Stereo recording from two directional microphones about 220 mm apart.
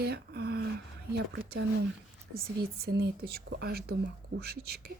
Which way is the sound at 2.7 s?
45° right (ahead or behind).